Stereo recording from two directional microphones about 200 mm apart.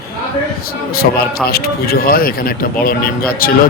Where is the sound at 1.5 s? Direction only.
50° left (ahead or behind).